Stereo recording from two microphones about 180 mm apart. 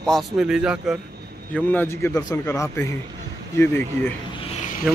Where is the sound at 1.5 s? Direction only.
10° left (ahead or behind).